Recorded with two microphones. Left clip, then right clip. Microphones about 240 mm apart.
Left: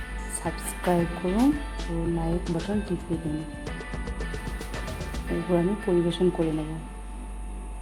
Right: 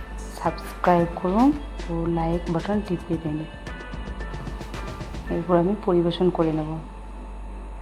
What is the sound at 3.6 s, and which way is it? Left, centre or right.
Music, centre.